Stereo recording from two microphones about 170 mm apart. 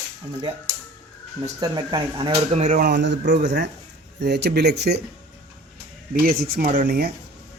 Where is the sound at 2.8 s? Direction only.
90° right.